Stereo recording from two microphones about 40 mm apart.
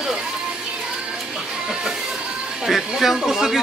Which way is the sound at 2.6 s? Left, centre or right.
Centre.